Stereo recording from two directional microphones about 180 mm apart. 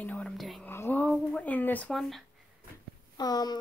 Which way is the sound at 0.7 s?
10° left (ahead or behind).